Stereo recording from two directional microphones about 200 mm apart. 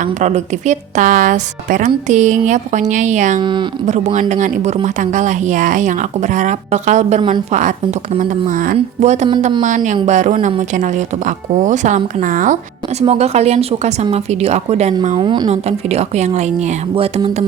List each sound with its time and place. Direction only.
0.0 s a woman's voice: 35° right (ahead or behind)
3.4 s music: 25° right (ahead or behind)
3.8 s a woman's voice: 35° right (ahead or behind)
16.9 s music: 30° right (ahead or behind)